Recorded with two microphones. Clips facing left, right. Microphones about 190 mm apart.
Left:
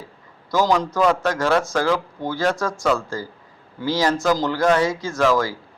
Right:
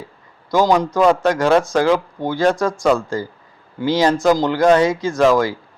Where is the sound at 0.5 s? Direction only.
15° right (ahead or behind).